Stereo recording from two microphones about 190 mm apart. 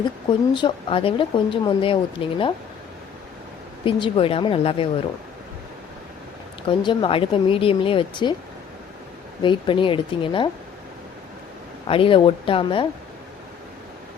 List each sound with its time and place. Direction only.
0.5 s speech: 25° left (ahead or behind)
3.8 s speech: 25° left (ahead or behind)
6.7 s speech: 25° left (ahead or behind)
9.4 s speech: 25° left (ahead or behind)
11.9 s speech: 30° left (ahead or behind)